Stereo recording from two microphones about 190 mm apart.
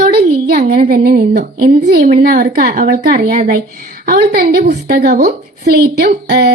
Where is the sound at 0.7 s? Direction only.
55° right (ahead or behind).